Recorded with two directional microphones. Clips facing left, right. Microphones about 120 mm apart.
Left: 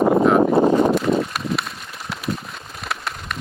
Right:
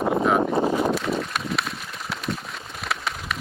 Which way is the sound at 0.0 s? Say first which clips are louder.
Left 6 dB; 55° left (ahead or behind).